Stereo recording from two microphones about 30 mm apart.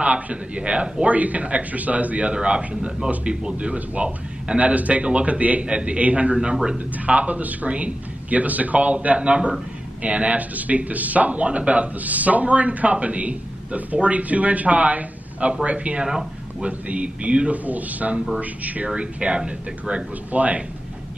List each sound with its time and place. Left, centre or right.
0.0 s a man's voice: right
1.1 s speech: right
2.3 s a man's voice: right
3.5 s a man's voice: right
5.6 s a man's voice: right
6.5 s speech: right
7.1 s a man's voice: right
16.0 s speech: right
16.6 s a man's voice: right
17.6 s speech: right
18.9 s a man's voice: right
20.3 s speech: right